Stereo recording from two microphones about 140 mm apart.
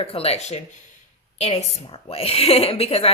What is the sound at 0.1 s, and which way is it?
A woman's voice, 45° left (ahead or behind).